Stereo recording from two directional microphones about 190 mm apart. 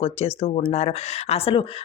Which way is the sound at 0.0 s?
30° left (ahead or behind).